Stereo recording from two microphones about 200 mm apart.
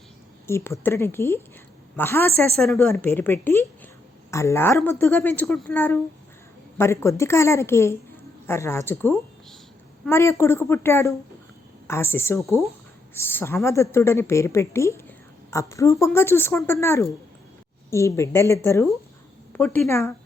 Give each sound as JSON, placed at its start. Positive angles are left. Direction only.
{"t": 0.4, "sound": "speech", "side_deg": 15}